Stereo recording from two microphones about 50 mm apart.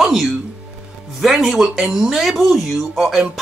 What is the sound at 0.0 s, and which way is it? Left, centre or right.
Speech, centre.